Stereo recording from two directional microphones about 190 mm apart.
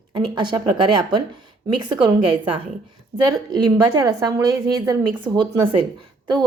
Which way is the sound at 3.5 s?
20° right (ahead or behind).